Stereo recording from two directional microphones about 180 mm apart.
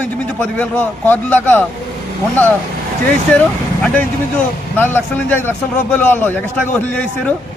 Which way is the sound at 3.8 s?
5° left (ahead or behind).